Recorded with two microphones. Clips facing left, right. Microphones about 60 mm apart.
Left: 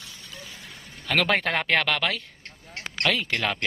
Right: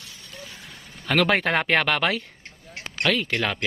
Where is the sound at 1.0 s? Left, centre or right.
Centre.